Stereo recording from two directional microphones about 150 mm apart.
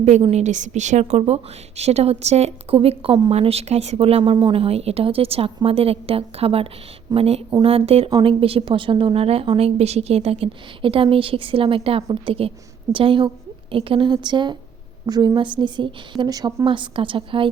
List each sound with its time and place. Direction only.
0.0 s a woman's voice: 45° right (ahead or behind)